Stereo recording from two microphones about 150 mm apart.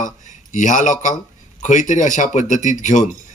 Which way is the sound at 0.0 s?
55° left (ahead or behind).